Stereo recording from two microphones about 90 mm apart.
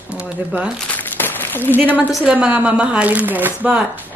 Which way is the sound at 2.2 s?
10° right (ahead or behind).